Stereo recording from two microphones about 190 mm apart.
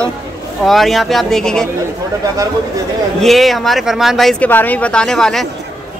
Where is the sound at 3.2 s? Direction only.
Centre (ahead or behind).